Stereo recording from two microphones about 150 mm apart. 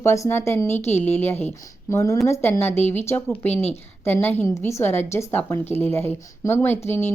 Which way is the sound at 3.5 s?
45° left (ahead or behind).